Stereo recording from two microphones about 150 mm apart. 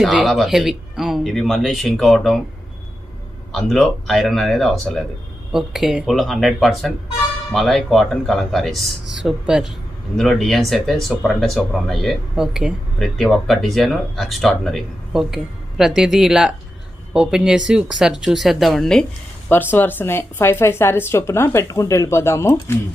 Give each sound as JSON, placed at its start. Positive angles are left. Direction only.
{"t": 0.0, "sound": "speech", "side_deg": 0}
{"t": 3.5, "sound": "speech", "side_deg": 0}